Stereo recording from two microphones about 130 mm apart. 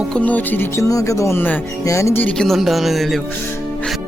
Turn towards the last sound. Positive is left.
turn(degrees=0)  # may be behind; listen again after turning